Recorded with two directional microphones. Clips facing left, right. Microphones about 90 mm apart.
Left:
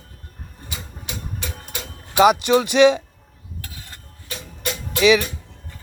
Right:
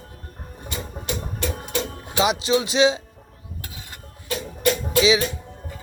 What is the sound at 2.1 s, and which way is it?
Speech, 55° left (ahead or behind).